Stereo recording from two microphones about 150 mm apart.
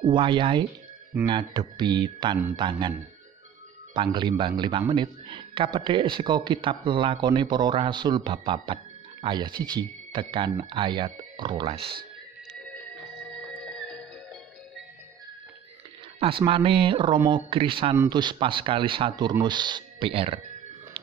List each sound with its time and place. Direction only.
0.0 s a man's voice: 30° right (ahead or behind)
1.1 s speech: 15° right (ahead or behind)
1.5 s a man's voice: 30° right (ahead or behind)
3.9 s a man's voice: 30° right (ahead or behind)
13.5 s music: 5° left (ahead or behind)
16.2 s a man's voice: 35° right (ahead or behind)